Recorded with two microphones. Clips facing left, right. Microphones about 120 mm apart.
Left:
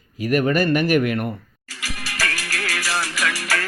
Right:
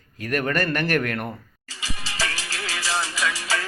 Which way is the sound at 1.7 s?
20° right (ahead or behind).